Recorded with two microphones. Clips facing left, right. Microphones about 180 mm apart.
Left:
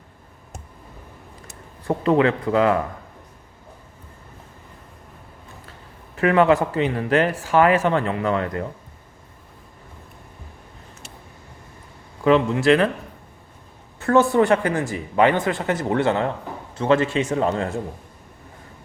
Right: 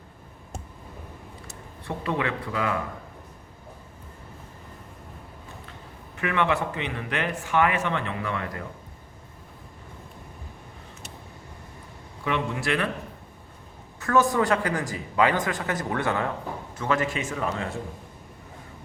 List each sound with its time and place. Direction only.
1.9 s speech: 40° left (ahead or behind)
6.1 s speech: 40° left (ahead or behind)
12.5 s a man's voice: 25° left (ahead or behind)
14.0 s a man's voice: 30° left (ahead or behind)
17.2 s speech: 35° left (ahead or behind)